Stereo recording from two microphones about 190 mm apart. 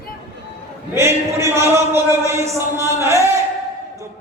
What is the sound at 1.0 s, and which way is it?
A man's voice, 15° right (ahead or behind).